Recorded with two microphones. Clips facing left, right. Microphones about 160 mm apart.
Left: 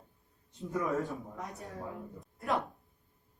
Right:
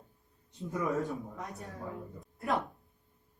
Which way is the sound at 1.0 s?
Centre (ahead or behind).